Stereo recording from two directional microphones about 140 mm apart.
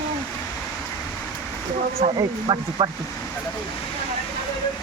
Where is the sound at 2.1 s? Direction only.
35° right (ahead or behind).